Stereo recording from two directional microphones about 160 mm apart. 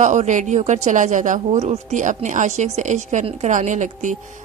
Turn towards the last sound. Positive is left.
turn(degrees=-50)  # may be behind; listen again after turning